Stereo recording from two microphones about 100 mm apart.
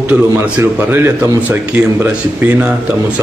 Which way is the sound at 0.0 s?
20° right (ahead or behind).